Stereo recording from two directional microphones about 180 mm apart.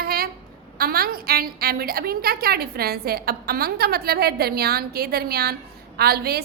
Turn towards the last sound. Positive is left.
turn(degrees=-60)  # may be behind; listen again after turning